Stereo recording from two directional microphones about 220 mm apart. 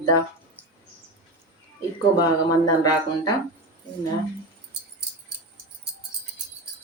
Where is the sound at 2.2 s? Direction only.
20° left (ahead or behind).